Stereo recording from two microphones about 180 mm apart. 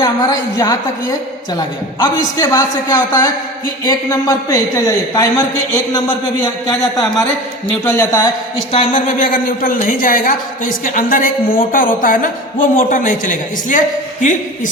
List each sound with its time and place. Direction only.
0.0 s a woman's voice: 20° left (ahead or behind)
7.7 s speech: 10° left (ahead or behind)
8.7 s a woman's voice: 35° left (ahead or behind)